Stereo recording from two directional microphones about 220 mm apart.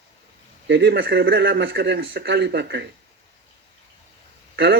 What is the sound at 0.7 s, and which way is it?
Speech, 45° right (ahead or behind).